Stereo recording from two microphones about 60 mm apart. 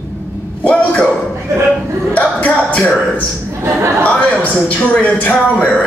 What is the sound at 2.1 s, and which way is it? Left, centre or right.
Music, left.